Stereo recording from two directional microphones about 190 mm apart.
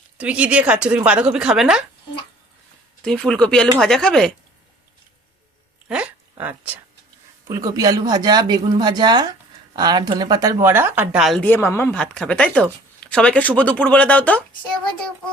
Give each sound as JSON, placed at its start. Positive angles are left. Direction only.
{"t": 0.2, "sound": "speech", "side_deg": -5}
{"t": 3.0, "sound": "speech", "side_deg": 5}
{"t": 5.9, "sound": "speech", "side_deg": -5}
{"t": 7.4, "sound": "speech", "side_deg": -20}